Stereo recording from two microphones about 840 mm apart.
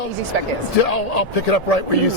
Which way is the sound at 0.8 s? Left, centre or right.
Left.